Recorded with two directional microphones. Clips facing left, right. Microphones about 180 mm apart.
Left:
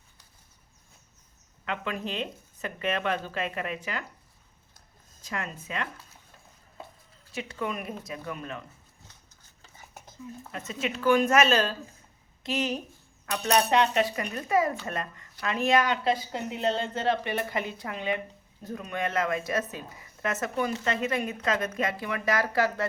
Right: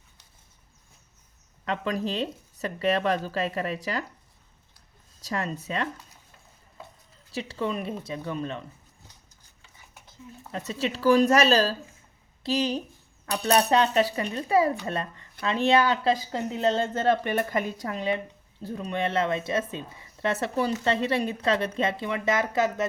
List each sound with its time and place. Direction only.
1.6 s speech: 35° right (ahead or behind)
5.2 s speech: 35° right (ahead or behind)
7.3 s speech: 30° right (ahead or behind)
9.6 s stir: 45° left (ahead or behind)
10.5 s a woman's voice: 35° right (ahead or behind)